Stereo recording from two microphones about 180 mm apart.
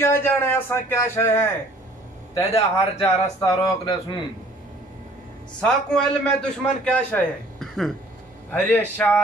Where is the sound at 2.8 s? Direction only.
25° left (ahead or behind).